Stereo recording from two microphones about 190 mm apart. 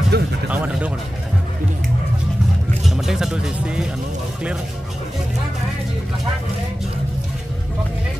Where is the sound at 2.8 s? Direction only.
Centre (ahead or behind).